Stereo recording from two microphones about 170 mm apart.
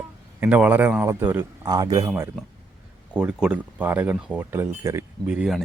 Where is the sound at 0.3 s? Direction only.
10° right (ahead or behind).